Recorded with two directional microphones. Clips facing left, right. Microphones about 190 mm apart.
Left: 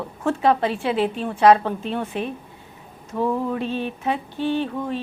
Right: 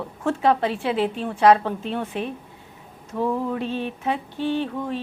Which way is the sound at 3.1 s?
25° left (ahead or behind).